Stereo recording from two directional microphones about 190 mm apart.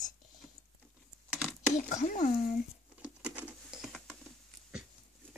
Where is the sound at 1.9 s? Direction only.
40° left (ahead or behind).